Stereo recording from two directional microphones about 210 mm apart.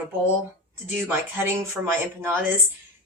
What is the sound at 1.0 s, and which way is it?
Speech, 10° right (ahead or behind).